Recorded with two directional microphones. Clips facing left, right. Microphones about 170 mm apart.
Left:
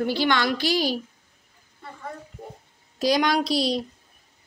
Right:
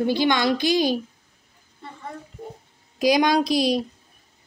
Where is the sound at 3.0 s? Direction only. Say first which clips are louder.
Right 3 dB; 15° right (ahead or behind).